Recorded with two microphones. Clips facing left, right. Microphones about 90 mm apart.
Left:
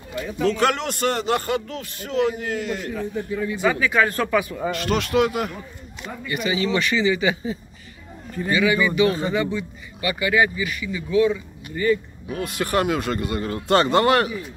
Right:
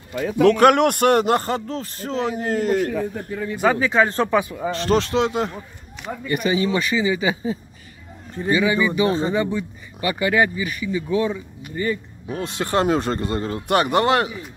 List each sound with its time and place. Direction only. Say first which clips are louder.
0.2 s speech: right 7 dB; 70° right (ahead or behind)
1.3 s a man's voice: right 2 dB; 35° right (ahead or behind)
6.2 s a man's voice: right 4 dB; 40° right (ahead or behind)
6.6 s speech: even; 20° right (ahead or behind)
9.6 s a man's voice: right 2 dB; 40° right (ahead or behind); by 14.4 s 20° right (ahead or behind)